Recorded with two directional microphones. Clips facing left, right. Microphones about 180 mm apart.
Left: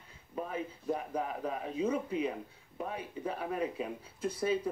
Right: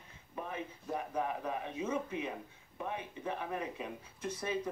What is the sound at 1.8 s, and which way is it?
Speech, 35° left (ahead or behind).